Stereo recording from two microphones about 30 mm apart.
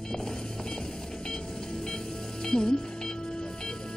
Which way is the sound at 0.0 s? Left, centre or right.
Left.